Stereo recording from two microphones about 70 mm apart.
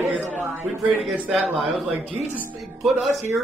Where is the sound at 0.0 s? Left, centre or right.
Right.